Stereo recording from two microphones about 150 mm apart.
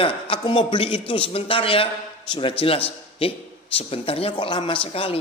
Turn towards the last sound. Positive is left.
turn(degrees=40)  # may be behind; listen again after turning